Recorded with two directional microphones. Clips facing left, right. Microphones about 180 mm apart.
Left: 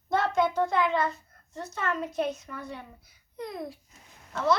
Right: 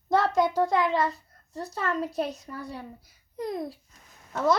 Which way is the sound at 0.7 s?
35° right (ahead or behind).